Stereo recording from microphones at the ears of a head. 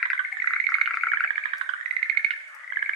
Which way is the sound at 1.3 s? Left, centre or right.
Right.